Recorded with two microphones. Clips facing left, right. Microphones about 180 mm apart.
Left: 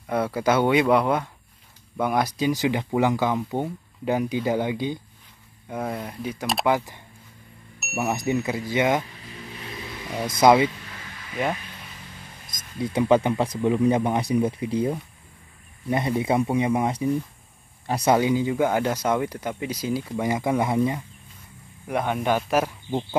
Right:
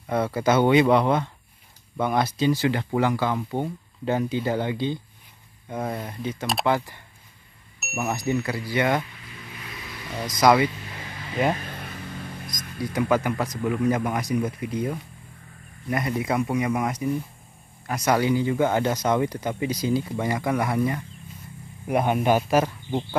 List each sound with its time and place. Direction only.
0.0 s speech: 5° left (ahead or behind)
6.6 s speech: 15° left (ahead or behind)
10.2 s speech: 25° left (ahead or behind)
11.5 s vehicle: 50° right (ahead or behind)
12.7 s speech: 25° left (ahead or behind)
18.2 s speech: 15° left (ahead or behind)
20.2 s speech: 20° left (ahead or behind)
21.8 s speech: 10° right (ahead or behind)
22.5 s speech: 5° left (ahead or behind)